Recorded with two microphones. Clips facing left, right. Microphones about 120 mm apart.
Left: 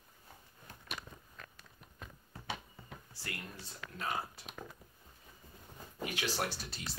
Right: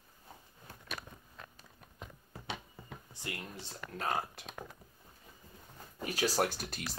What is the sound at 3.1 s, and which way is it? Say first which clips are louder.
Speech: right 3 dB; 20° right (ahead or behind).